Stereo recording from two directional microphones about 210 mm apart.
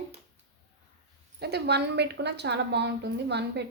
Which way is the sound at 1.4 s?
50° right (ahead or behind).